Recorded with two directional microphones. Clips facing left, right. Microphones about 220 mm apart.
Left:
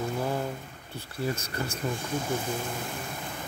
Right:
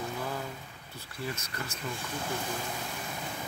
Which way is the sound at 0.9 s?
30° left (ahead or behind).